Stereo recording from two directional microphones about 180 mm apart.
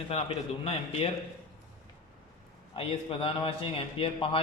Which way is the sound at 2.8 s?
30° left (ahead or behind).